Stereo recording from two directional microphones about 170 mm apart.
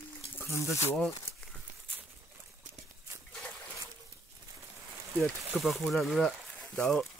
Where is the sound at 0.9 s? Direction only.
Centre (ahead or behind).